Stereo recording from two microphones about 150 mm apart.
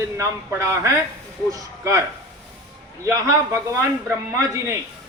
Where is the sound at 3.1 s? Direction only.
20° right (ahead or behind).